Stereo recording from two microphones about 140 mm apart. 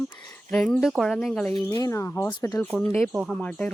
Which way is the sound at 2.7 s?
10° left (ahead or behind).